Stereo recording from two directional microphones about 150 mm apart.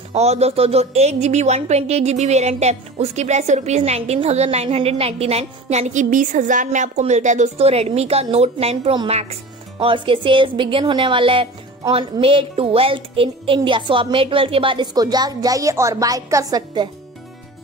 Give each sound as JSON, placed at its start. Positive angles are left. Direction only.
{"t": 0.1, "sound": "a woman's voice", "side_deg": -45}